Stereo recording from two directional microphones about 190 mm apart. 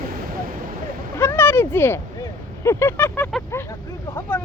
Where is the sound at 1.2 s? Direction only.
10° left (ahead or behind).